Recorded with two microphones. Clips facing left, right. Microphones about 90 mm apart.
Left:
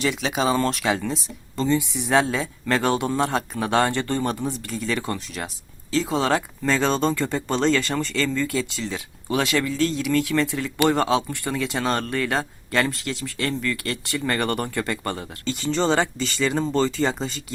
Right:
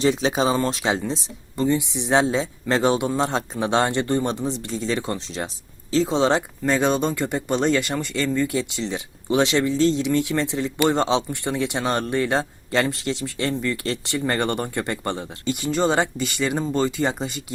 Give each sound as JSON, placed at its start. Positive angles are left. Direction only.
{"t": 0.0, "sound": "speech", "side_deg": -30}
{"t": 0.5, "sound": "speech", "side_deg": -20}